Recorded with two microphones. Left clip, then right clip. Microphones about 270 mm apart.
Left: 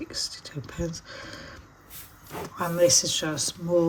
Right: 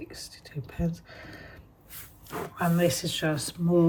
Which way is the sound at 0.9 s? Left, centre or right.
Left.